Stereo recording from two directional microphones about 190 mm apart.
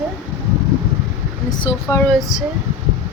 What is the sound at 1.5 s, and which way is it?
Speech, 20° left (ahead or behind).